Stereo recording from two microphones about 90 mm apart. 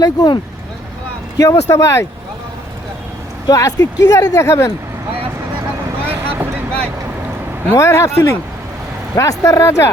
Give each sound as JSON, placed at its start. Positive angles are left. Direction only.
{"t": 0.0, "sound": "speech", "side_deg": 45}
{"t": 1.4, "sound": "speech", "side_deg": 35}
{"t": 3.5, "sound": "speech", "side_deg": 40}
{"t": 4.4, "sound": "speech", "side_deg": 30}
{"t": 6.0, "sound": "vehicle", "side_deg": -25}
{"t": 7.8, "sound": "speech", "side_deg": 35}